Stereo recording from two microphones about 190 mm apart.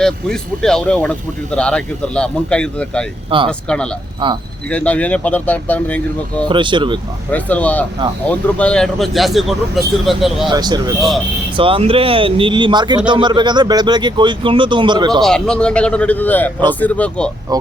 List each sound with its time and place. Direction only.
0.0 s speech: 5° left (ahead or behind)
3.2 s speech: 25° right (ahead or behind)
4.7 s speech: 5° left (ahead or behind)
6.5 s speech: 25° right (ahead or behind)
7.3 s speech: 10° left (ahead or behind)
10.5 s speech: 20° right (ahead or behind)
15.2 s speech: 5° left (ahead or behind)